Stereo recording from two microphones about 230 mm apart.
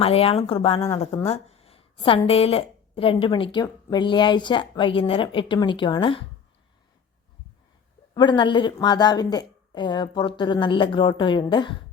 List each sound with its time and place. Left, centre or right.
0.0 s a woman's voice: left
8.1 s a woman's voice: centre